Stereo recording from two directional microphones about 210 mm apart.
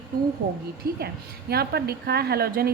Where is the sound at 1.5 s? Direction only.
50° right (ahead or behind).